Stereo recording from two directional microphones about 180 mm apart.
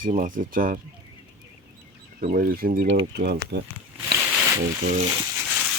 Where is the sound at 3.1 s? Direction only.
70° right (ahead or behind).